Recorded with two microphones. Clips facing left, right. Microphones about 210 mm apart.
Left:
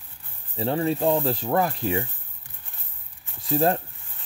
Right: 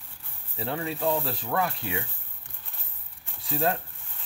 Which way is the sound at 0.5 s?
35° left (ahead or behind).